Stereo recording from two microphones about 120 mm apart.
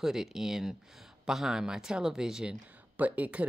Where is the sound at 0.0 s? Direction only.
5° right (ahead or behind).